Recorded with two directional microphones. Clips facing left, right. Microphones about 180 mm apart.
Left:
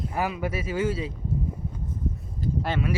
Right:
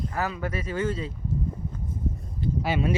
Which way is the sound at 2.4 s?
40° left (ahead or behind).